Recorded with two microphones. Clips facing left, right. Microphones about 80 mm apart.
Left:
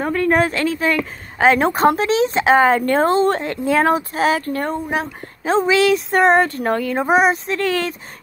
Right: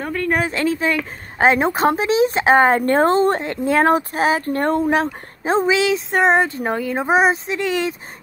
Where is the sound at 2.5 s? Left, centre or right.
Right.